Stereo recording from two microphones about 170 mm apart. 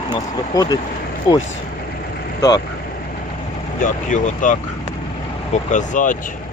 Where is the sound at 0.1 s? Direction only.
25° left (ahead or behind).